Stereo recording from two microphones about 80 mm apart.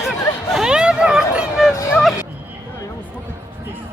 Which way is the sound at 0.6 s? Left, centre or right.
Centre.